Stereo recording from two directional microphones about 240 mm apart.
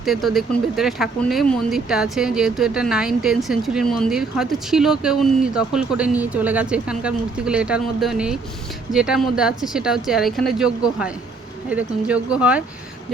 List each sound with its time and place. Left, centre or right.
0.0 s speech: centre